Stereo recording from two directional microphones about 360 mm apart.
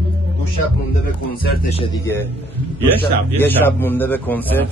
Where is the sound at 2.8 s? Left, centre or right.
Centre.